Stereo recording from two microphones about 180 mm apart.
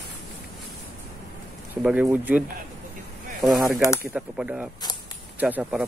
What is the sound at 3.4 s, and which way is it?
Speech, centre (ahead or behind).